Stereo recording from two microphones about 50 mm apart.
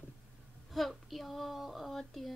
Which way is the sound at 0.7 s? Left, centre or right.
Centre.